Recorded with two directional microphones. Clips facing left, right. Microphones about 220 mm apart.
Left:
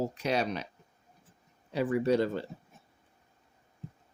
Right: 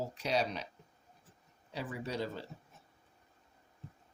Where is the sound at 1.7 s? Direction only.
60° left (ahead or behind).